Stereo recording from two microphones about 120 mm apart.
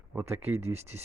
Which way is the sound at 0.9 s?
20° right (ahead or behind).